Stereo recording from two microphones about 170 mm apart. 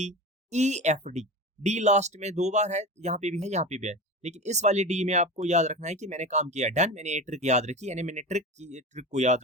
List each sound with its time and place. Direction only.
0.0 s speech: 40° right (ahead or behind)